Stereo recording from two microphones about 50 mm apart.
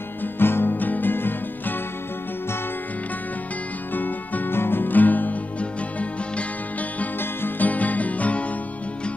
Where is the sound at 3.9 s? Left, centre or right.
Left.